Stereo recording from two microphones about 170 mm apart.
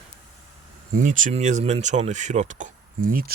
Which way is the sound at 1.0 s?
50° right (ahead or behind).